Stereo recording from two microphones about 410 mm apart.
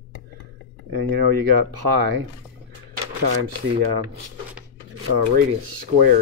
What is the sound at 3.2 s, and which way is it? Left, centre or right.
Speech, right.